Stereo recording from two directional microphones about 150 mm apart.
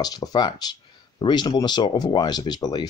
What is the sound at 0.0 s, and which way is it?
Speech, 25° left (ahead or behind).